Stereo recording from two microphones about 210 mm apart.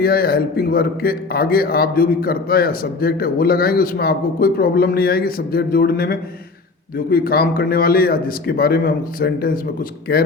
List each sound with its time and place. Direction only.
0.0 s a man's voice: 45° left (ahead or behind)